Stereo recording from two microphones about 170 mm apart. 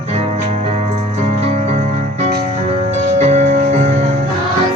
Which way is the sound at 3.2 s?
40° right (ahead or behind).